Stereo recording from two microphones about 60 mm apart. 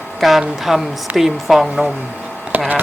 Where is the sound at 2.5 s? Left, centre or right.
Right.